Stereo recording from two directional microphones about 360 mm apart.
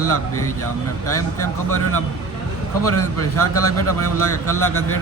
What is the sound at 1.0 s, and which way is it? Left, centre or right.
A man's voice, left.